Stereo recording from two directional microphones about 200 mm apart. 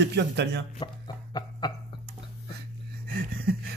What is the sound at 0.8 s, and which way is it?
Music, 20° left (ahead or behind).